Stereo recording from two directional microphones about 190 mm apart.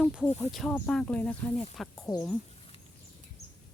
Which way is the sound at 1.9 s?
15° left (ahead or behind).